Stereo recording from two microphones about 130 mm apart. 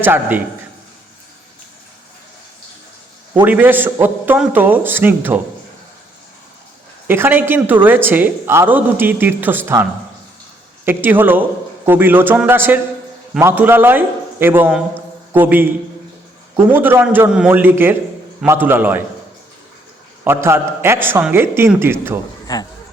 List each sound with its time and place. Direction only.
0.0 s a woman's voice: 15° right (ahead or behind)
3.4 s a woman's voice: 15° right (ahead or behind)
7.1 s a woman's voice: 15° right (ahead or behind)
10.8 s a woman's voice: 15° right (ahead or behind)
16.7 s a woman's voice: 15° right (ahead or behind)
20.2 s a woman's voice: 20° right (ahead or behind)
22.5 s speech: 30° left (ahead or behind)